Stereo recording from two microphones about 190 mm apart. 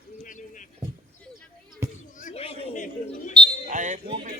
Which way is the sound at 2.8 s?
40° left (ahead or behind).